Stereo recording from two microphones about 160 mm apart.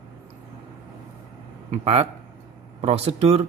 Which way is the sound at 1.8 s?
40° right (ahead or behind).